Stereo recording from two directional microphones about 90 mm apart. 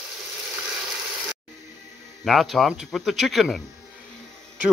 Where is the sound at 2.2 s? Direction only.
Centre (ahead or behind).